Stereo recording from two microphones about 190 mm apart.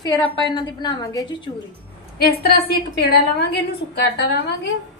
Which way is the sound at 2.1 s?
55° left (ahead or behind).